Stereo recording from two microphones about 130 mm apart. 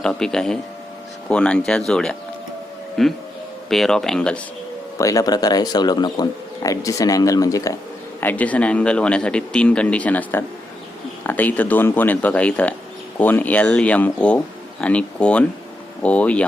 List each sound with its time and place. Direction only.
0.0 s speech: 5° left (ahead or behind)
4.9 s a man's voice: 25° left (ahead or behind)
8.2 s speech: 15° left (ahead or behind)